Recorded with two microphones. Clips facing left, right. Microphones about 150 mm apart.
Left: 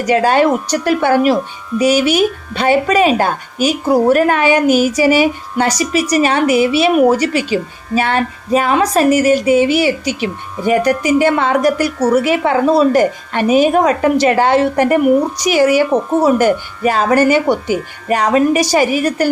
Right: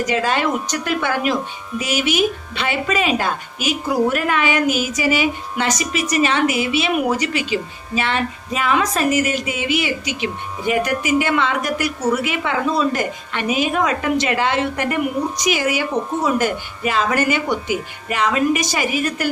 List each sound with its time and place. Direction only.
0.0 s speech: 35° left (ahead or behind)